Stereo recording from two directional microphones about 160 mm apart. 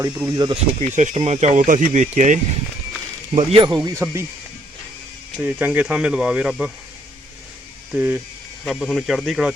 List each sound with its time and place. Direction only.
0.0 s speech: 25° right (ahead or behind)
0.5 s speech: 45° right (ahead or behind)
3.3 s speech: 35° right (ahead or behind)
4.0 s speech: 15° right (ahead or behind)
5.4 s speech: 10° right (ahead or behind)
7.9 s speech: 10° right (ahead or behind)
8.6 s speech: centre (ahead or behind)